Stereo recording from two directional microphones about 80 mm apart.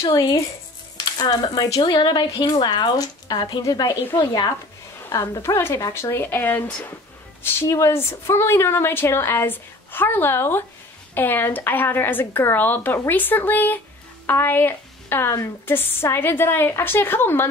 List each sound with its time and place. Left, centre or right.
0.1 s speech: left
1.8 s speech: left
5.4 s a woman's voice: left